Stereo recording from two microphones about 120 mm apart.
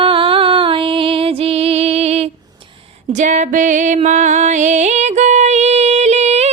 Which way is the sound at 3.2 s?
85° right.